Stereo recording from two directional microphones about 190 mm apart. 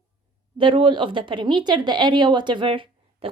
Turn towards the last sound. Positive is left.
turn(degrees=-25)  # may be behind; listen again after turning